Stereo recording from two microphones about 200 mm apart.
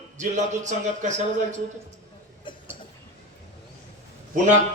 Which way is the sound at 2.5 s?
25° left (ahead or behind).